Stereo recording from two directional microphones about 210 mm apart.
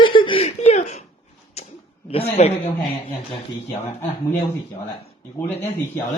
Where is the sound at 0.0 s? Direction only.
25° left (ahead or behind).